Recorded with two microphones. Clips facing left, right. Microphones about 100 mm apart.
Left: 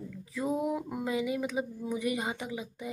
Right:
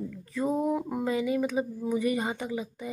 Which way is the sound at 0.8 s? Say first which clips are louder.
Right 5 dB; 40° right (ahead or behind).